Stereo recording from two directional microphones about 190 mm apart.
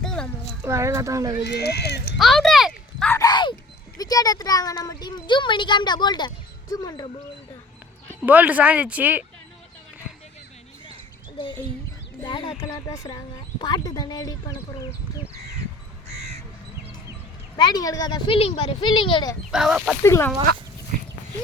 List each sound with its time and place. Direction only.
0.0 s a sound: 5° left (ahead or behind)
0.6 s speech: 15° right (ahead or behind)
1.5 s speech: 60° left (ahead or behind)
2.1 s a sound: centre (ahead or behind)
3.1 s a sound: 20° left (ahead or behind)
3.9 s speech: 20° left (ahead or behind)
8.2 s speech: 10° right (ahead or behind)
12.2 s speech: 25° left (ahead or behind)
16.0 s crow: 35° right (ahead or behind)
17.7 s speech: 20° left (ahead or behind)
19.5 s speech: 5° right (ahead or behind)
20.0 s speech: 15° left (ahead or behind)